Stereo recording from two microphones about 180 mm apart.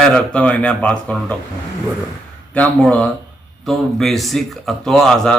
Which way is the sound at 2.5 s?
5° left (ahead or behind).